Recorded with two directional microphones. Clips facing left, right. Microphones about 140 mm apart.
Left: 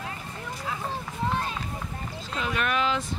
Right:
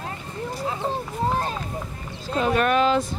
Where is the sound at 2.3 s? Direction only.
40° right (ahead or behind).